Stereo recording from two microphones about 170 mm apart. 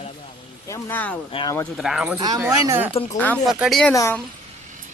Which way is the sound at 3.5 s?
Centre (ahead or behind).